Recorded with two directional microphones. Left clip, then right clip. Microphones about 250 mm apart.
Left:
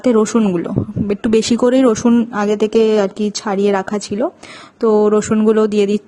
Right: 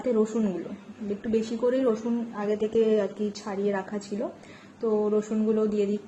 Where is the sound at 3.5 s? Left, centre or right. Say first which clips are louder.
Left 14 dB; left.